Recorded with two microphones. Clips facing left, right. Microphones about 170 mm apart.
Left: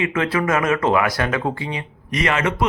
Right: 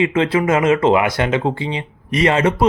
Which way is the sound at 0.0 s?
25° right (ahead or behind).